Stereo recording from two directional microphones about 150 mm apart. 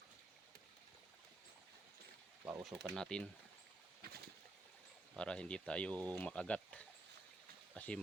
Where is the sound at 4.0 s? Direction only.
90° right.